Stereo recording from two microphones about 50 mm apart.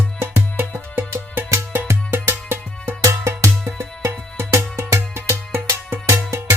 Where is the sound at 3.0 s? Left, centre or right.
Right.